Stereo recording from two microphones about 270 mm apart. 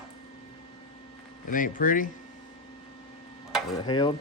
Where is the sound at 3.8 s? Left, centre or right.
Centre.